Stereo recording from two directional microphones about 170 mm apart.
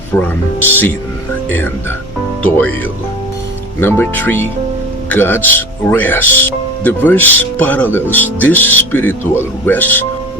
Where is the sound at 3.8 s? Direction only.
15° left (ahead or behind).